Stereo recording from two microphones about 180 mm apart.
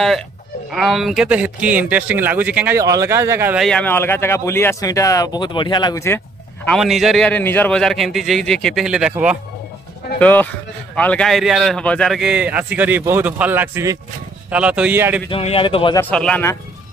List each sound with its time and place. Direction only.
0.7 s speech: centre (ahead or behind)
2.8 s speech: 20° right (ahead or behind)
3.5 s speech: 5° left (ahead or behind)
10.1 s a man's voice: 10° left (ahead or behind); by 15.2 s 10° right (ahead or behind)
15.3 s speech: 30° left (ahead or behind)
16.0 s speech: 5° left (ahead or behind)